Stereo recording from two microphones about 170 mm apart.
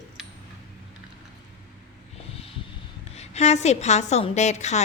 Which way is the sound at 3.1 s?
40° left (ahead or behind).